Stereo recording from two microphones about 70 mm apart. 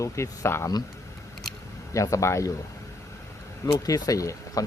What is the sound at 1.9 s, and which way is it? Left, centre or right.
Speech, left.